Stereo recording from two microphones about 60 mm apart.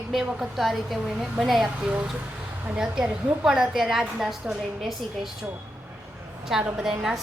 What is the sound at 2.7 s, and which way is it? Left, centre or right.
A woman's voice, centre.